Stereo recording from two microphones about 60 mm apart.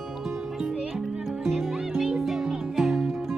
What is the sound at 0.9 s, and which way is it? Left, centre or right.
Music, centre.